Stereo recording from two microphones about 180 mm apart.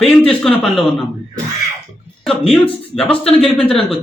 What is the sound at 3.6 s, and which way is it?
Speech, 30° left (ahead or behind).